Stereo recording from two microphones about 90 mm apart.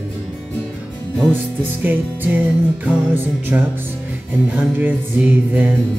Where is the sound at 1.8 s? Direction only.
20° right (ahead or behind).